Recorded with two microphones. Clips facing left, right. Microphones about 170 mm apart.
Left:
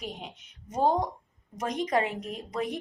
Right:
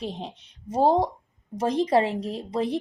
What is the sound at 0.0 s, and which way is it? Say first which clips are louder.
A woman's voice: right 6 dB; 30° right (ahead or behind).